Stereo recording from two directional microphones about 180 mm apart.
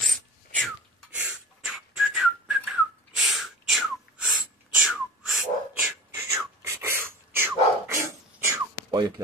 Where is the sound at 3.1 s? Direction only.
Centre (ahead or behind).